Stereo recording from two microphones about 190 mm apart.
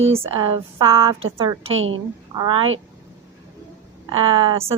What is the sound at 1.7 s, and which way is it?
Speech, 90° right.